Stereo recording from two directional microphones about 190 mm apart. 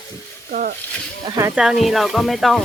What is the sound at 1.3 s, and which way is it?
Speech, 15° right (ahead or behind).